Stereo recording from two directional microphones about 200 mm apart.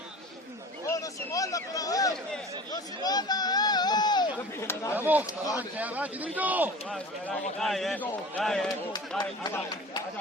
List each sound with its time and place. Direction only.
1.3 s a man's voice: 15° left (ahead or behind)
3.0 s a sound: 20° left (ahead or behind)
4.9 s a man's voice: 10° right (ahead or behind)
9.4 s a man's voice: 20° left (ahead or behind)